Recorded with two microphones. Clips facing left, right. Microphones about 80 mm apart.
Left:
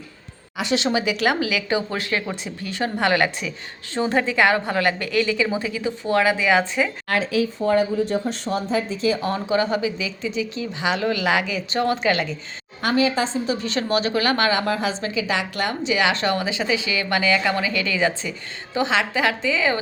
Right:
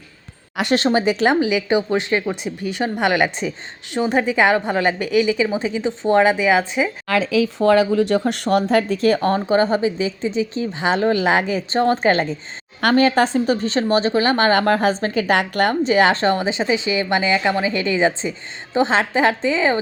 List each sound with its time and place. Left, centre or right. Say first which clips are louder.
0.5 s a woman's voice: right 4 dB; right
0.9 s a woman's voice: right 5 dB; right
6.4 s a woman's voice: right 2 dB; centre
7.4 s speech: right 5 dB; right
12.8 s a woman's voice: right 5 dB; right
13.6 s speech: right 4 dB; right
14.5 s a woman's voice: right 6 dB; right